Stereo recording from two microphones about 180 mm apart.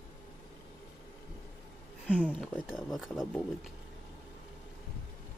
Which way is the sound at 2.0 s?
5° right (ahead or behind).